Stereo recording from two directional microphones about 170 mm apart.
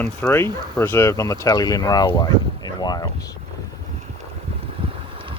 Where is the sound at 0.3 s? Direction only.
15° left (ahead or behind).